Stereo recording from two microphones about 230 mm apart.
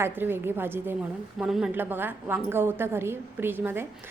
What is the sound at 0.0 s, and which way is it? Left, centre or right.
A woman's voice, centre.